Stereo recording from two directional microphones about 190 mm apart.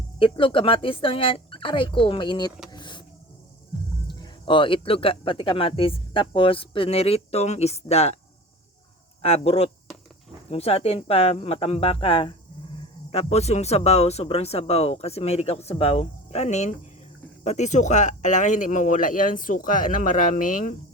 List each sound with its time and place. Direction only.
0.2 s speech: 25° left (ahead or behind)
2.6 s a sound: 25° left (ahead or behind)
4.1 s speech: 25° left (ahead or behind)
9.2 s speech: 30° left (ahead or behind)